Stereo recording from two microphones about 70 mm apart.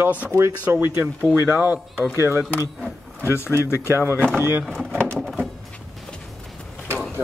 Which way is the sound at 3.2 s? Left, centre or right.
Left.